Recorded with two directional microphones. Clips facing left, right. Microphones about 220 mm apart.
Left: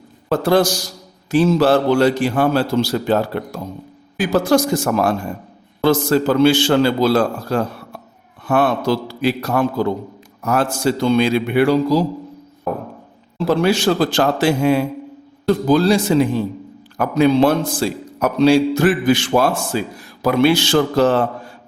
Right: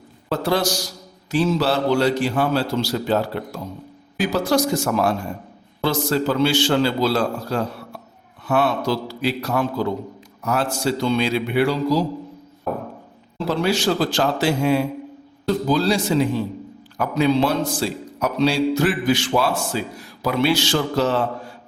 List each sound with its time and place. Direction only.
0.3 s a man's voice: 50° left (ahead or behind)
13.5 s a man's voice: 55° left (ahead or behind)